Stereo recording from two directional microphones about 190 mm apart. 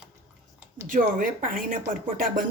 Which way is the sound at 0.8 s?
45° right (ahead or behind).